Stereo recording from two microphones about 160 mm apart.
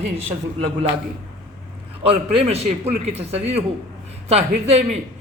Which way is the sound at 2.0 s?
40° right (ahead or behind).